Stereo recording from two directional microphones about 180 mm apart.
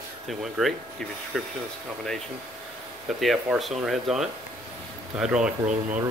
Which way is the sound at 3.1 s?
Centre (ahead or behind).